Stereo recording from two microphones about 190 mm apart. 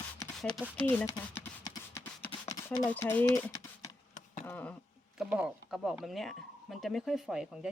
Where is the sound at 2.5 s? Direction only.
15° left (ahead or behind).